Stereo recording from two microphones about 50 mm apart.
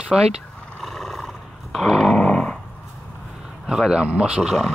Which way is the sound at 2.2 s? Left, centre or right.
Centre.